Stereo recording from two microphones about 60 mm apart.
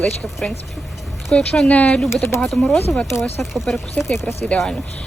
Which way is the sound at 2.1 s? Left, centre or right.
Left.